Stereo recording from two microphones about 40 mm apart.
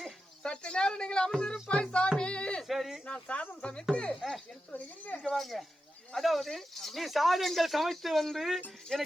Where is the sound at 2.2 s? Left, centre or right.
Left.